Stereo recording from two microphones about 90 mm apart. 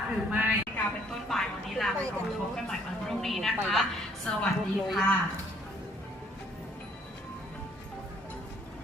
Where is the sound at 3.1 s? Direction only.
5° left (ahead or behind).